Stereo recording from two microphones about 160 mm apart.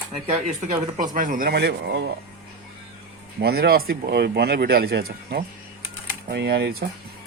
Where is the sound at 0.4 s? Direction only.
50° right (ahead or behind); by 2.1 s 90° right.